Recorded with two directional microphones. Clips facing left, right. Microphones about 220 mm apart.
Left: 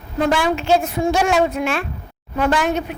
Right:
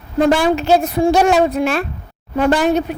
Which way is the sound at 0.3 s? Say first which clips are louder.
Right 3 dB; 40° right (ahead or behind).